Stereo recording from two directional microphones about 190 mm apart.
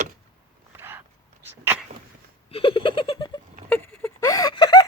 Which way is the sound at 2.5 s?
30° left (ahead or behind).